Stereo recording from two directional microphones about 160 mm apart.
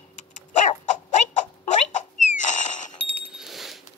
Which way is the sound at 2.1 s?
50° left (ahead or behind).